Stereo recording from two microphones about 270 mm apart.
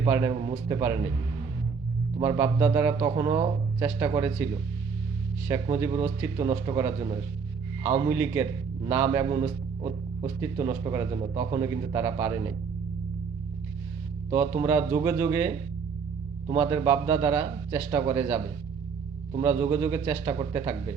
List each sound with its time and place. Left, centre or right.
0.0 s speech: centre
2.2 s speech: centre
5.6 s speech: centre
14.3 s speech: centre
18.0 s speech: centre
19.3 s speech: centre